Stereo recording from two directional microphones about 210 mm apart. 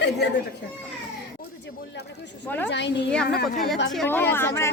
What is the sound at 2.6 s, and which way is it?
Speech, 55° left (ahead or behind).